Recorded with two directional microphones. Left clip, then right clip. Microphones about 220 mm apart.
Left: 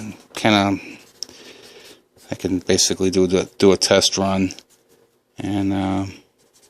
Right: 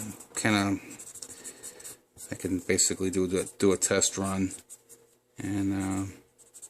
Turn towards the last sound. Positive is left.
turn(degrees=30)  # may be behind; listen again after turning